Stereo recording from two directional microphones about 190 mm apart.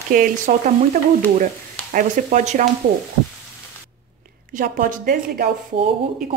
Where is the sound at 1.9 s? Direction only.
45° right (ahead or behind).